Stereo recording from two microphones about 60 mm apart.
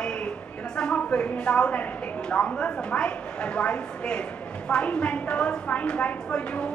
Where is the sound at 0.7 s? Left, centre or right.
Centre.